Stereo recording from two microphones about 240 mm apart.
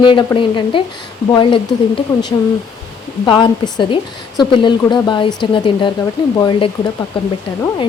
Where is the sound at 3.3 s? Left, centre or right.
Left.